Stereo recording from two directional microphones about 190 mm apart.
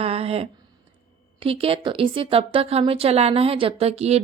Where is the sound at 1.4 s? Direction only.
30° right (ahead or behind).